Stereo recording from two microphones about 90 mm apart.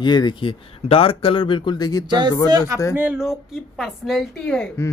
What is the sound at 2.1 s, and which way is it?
Speech, 55° right (ahead or behind).